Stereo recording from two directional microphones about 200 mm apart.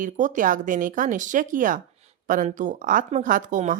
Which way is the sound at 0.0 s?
40° right (ahead or behind).